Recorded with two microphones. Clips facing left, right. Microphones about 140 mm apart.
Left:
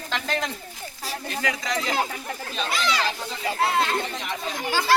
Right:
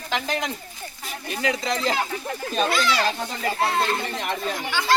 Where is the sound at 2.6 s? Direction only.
45° right (ahead or behind).